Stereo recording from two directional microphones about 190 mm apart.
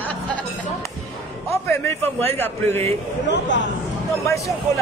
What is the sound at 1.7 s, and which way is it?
Speech, 10° left (ahead or behind).